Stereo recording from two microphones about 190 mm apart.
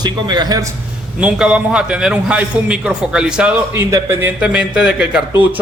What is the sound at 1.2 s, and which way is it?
A man's voice, 5° right (ahead or behind).